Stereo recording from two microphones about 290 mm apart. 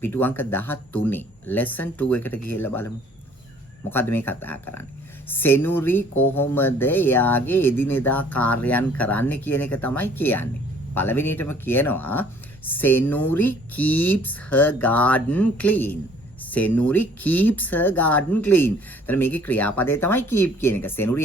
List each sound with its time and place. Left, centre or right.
0.0 s speech: centre